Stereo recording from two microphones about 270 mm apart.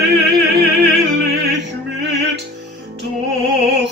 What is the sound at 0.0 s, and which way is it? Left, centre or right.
Music, right.